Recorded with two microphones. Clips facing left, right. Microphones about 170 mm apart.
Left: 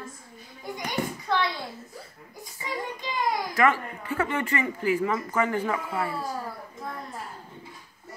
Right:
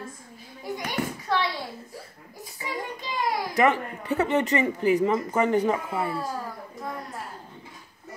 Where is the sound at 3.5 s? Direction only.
20° right (ahead or behind).